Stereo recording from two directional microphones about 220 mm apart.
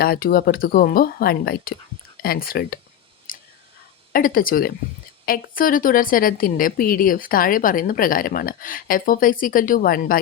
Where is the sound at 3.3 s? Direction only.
40° left (ahead or behind).